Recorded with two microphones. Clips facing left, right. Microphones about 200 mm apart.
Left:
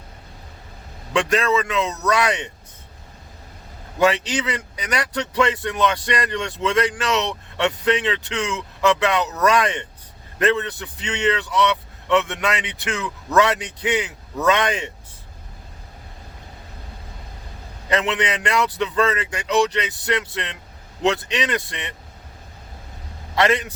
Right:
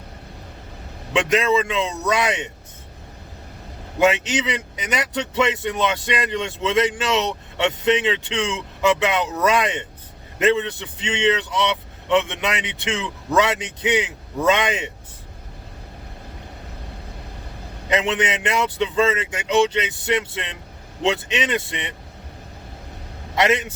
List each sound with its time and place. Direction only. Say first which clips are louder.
1.1 s a man's voice: right 1 dB; 20° right (ahead or behind)
4.0 s a man's voice: right 1 dB; 20° right (ahead or behind)
17.8 s a man's voice: right 1 dB; 20° right (ahead or behind)
23.3 s a man's voice: even; 20° right (ahead or behind)